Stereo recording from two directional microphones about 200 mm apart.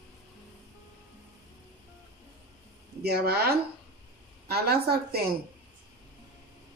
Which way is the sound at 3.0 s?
55° right (ahead or behind).